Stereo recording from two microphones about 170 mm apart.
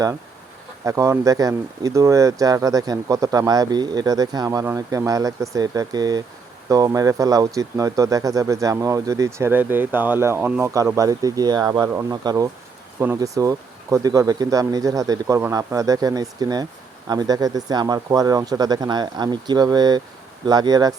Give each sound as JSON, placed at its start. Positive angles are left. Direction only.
{"t": 0.9, "sound": "speech", "side_deg": -20}